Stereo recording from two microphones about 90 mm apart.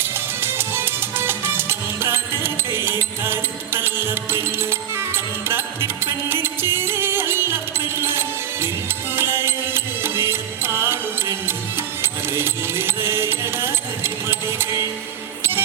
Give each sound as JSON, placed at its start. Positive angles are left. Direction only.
{"t": 0.6, "sound": "music", "side_deg": -25}